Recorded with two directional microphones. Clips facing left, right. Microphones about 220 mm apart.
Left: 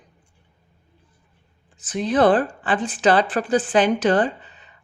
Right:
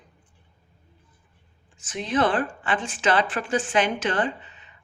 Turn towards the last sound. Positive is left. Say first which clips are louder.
# left 5 dB
turn(degrees=35)  # may be behind; listen again after turning